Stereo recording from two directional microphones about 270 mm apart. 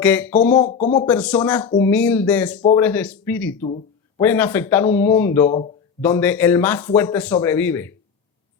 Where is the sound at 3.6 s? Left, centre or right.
Left.